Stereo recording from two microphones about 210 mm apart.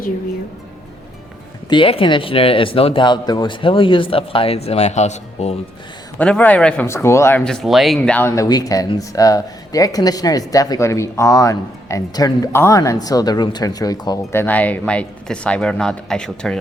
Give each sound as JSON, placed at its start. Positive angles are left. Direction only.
{"t": 1.7, "sound": "speech", "side_deg": 25}
{"t": 6.1, "sound": "speech", "side_deg": 5}